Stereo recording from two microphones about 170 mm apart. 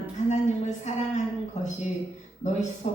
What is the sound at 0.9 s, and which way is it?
A woman's voice, 45° left (ahead or behind).